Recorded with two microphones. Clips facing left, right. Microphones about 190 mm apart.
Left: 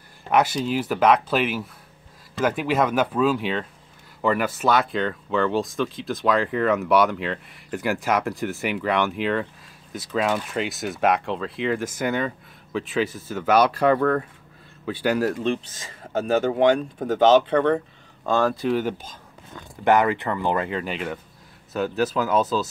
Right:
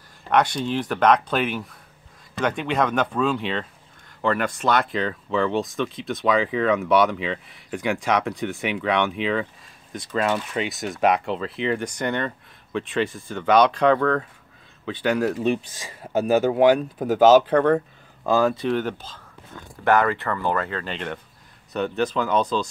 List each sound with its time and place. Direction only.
0.3 s speech: 5° left (ahead or behind)
15.3 s speech: 10° right (ahead or behind)